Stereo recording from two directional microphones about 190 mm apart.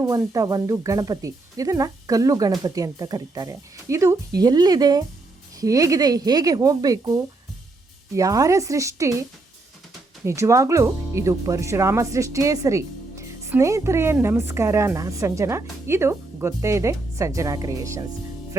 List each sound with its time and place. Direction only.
0.0 s speech: 15° right (ahead or behind)
10.2 s speech: 15° right (ahead or behind)